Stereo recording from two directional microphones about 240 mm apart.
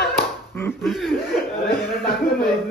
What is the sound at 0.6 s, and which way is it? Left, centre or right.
Speech, centre.